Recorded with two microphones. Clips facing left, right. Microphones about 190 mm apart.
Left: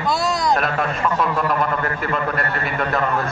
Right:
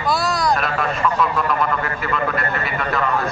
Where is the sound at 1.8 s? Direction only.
45° left (ahead or behind).